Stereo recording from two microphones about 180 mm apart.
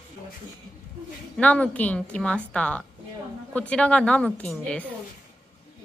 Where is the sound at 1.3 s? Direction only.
5° left (ahead or behind).